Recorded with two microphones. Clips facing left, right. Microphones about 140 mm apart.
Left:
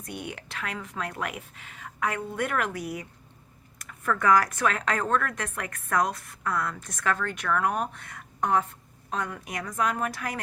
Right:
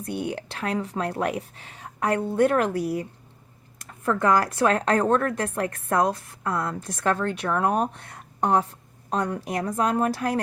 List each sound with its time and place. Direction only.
0.0 s speech: 30° right (ahead or behind)